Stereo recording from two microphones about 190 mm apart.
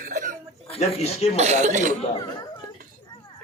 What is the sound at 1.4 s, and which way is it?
Speech, 35° right (ahead or behind).